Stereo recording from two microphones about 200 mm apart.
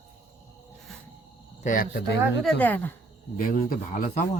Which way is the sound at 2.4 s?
10° left (ahead or behind).